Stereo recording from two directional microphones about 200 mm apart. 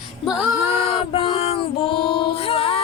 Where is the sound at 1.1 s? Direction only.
30° left (ahead or behind).